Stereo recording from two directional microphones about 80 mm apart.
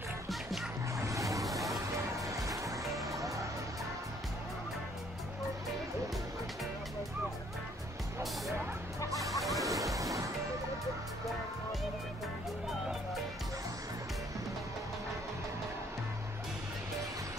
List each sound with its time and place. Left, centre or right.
0.3 s music: centre
1.0 s vehicle: right
1.7 s music: right
9.3 s music: centre
9.6 s waves: right
9.9 s music: right